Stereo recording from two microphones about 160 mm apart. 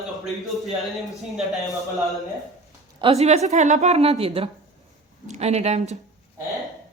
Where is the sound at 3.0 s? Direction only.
40° right (ahead or behind).